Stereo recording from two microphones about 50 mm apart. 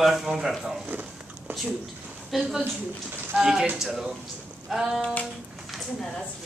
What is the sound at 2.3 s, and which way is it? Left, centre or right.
A woman's voice, centre.